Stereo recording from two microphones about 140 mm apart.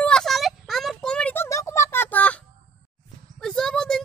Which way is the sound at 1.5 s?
20° left (ahead or behind).